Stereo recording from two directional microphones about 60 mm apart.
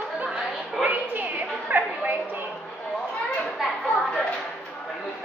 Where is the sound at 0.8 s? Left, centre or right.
Right.